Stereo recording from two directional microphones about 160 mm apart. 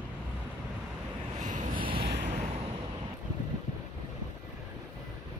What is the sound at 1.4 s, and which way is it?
Wind, 50° right (ahead or behind).